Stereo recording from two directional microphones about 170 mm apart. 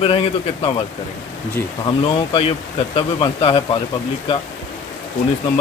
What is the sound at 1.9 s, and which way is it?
Speech, 30° left (ahead or behind).